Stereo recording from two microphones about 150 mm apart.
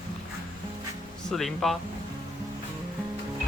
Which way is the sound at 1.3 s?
Centre (ahead or behind).